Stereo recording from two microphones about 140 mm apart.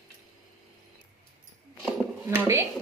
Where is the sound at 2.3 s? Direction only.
15° right (ahead or behind).